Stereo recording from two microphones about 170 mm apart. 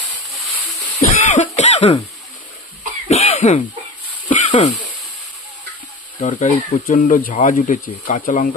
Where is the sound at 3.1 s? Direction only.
40° left (ahead or behind).